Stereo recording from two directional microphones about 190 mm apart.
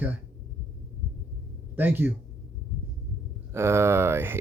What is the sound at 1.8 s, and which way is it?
Speech, 10° right (ahead or behind).